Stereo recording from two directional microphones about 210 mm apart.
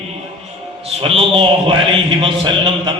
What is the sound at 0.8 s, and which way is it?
A man's voice, 25° right (ahead or behind).